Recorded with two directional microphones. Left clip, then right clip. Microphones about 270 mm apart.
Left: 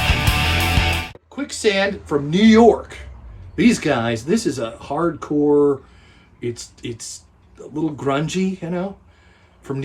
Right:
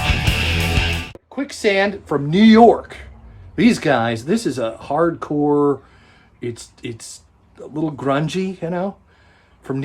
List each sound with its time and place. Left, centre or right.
0.0 s music: centre
1.4 s speech: centre